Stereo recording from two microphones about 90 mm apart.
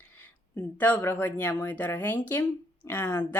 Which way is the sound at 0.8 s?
20° left (ahead or behind).